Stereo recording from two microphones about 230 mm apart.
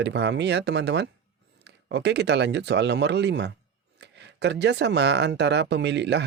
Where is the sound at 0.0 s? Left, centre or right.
Right.